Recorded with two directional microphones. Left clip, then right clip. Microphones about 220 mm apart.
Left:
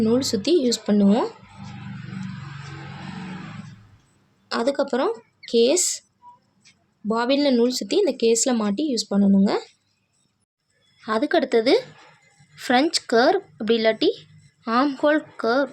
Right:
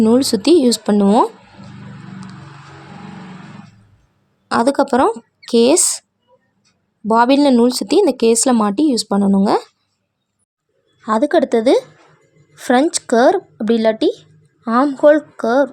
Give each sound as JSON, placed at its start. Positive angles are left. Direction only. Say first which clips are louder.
{"t": 0.0, "sound": "speech", "louder": "right 8 dB", "side_deg": -40}
{"t": 4.4, "sound": "speech", "louder": "right 8 dB", "side_deg": -45}
{"t": 7.1, "sound": "speech", "louder": "right 9 dB", "side_deg": -45}
{"t": 11.0, "sound": "speech", "louder": "right 7 dB", "side_deg": -30}